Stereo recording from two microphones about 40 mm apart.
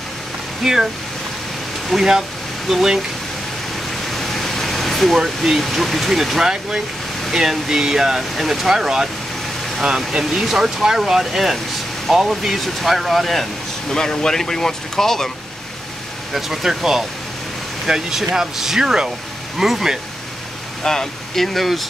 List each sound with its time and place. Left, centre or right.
0.6 s speech: centre
1.9 s speech: centre
2.7 s speech: centre
3.9 s speech: centre
13.8 s speech: centre
16.3 s speech: centre
20.8 s speech: centre